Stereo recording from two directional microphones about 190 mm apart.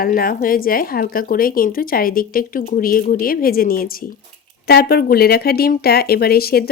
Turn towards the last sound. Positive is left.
turn(degrees=55)  # may be behind; listen again after turning